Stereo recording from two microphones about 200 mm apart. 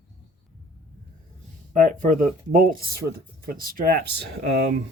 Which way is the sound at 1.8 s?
40° right (ahead or behind).